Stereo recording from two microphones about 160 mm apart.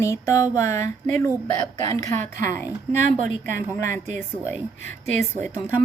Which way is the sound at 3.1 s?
50° right (ahead or behind).